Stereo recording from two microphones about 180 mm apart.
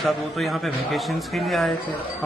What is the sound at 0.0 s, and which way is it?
A man's voice, centre (ahead or behind).